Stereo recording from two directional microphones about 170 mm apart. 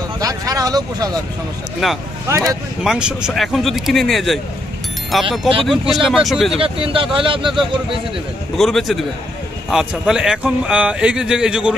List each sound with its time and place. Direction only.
0.2 s speech: 20° right (ahead or behind)
1.8 s speech: centre (ahead or behind)
2.2 s speech: 15° right (ahead or behind)
2.8 s speech: 5° right (ahead or behind)
6.5 s speech: 30° right (ahead or behind)
8.5 s speech: centre (ahead or behind)